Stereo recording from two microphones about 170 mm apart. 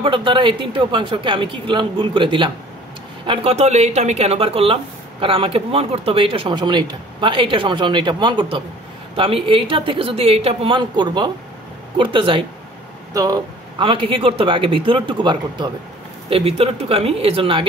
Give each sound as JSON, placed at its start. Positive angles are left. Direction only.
{"t": 0.0, "sound": "speech", "side_deg": -30}